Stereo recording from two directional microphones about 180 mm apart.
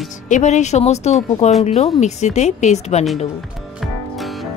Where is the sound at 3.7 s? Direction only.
Centre (ahead or behind).